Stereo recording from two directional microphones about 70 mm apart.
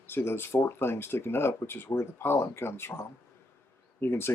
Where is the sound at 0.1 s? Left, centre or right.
Left.